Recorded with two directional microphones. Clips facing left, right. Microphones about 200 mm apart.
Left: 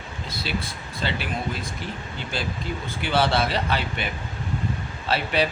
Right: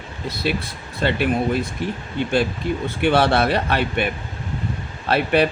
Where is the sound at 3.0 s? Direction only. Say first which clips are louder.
Right 5 dB; 60° right (ahead or behind).